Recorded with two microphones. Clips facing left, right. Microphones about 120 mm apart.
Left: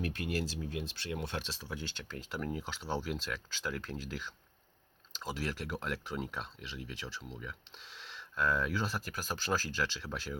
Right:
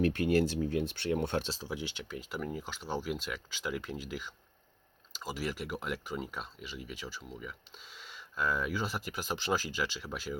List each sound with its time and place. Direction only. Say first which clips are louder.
0.0 s speech: right 9 dB; 60° right (ahead or behind)
1.5 s speech: right 5 dB; 30° right (ahead or behind)
1.7 s speech: right 2 dB; 10° right (ahead or behind)